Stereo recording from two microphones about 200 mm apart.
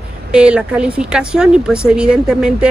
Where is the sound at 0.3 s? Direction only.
5° right (ahead or behind).